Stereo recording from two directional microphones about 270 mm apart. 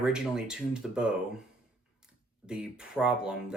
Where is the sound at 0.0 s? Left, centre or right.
Centre.